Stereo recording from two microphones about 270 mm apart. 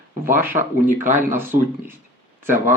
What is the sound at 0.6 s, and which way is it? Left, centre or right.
Speech, right.